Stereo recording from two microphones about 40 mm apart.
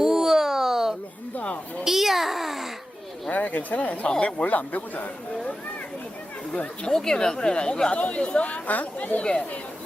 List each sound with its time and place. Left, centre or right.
0.0 s a sound: centre
3.3 s speech: left
4.0 s speech: left
4.4 s speech: left
6.8 s speech: centre; by 9.2 s left